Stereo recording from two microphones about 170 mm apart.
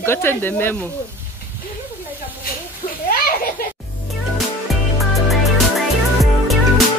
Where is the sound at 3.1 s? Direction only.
60° left (ahead or behind).